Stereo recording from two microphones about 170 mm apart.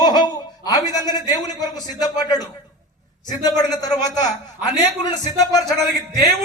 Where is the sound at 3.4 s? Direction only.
20° left (ahead or behind).